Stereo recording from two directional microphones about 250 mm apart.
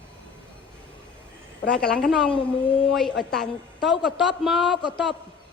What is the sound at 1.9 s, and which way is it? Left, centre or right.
Speech, centre.